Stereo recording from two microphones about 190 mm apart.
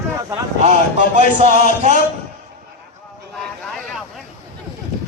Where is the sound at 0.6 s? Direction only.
40° right (ahead or behind).